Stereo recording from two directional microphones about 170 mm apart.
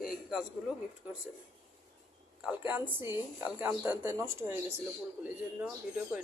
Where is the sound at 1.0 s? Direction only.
10° right (ahead or behind).